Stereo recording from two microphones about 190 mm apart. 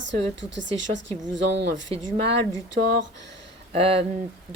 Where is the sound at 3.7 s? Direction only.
30° right (ahead or behind).